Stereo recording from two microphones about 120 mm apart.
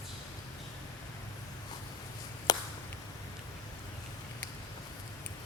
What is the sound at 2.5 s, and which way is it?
Chop, 30° left (ahead or behind).